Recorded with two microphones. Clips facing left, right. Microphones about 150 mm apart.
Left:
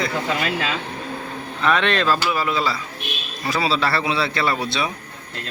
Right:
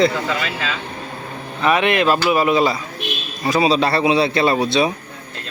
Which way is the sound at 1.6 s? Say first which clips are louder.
Right 3 dB; 10° right (ahead or behind).